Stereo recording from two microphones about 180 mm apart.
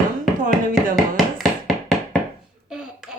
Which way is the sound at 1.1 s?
Centre (ahead or behind).